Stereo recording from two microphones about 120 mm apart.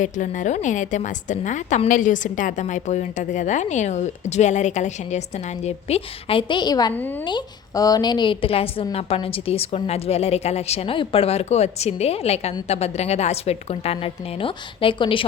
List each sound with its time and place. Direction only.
0.0 s a woman's voice: 90° left; by 6.9 s 35° left (ahead or behind)
6.9 s a woman's voice: 15° left (ahead or behind)
7.3 s a woman's voice: 35° left (ahead or behind)